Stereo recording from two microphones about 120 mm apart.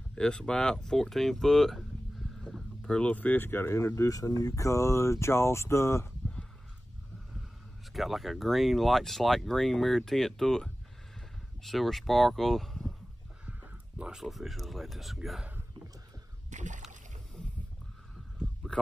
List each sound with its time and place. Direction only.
0.1 s speech: 5° left (ahead or behind); by 6.0 s 25° left (ahead or behind)
7.9 s speech: centre (ahead or behind)
13.5 s speech: 15° right (ahead or behind)
16.4 s rowboat: 90° right